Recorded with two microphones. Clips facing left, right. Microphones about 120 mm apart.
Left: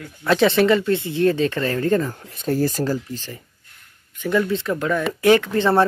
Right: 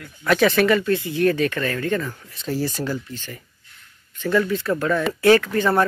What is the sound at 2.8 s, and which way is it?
Speech, 35° left (ahead or behind).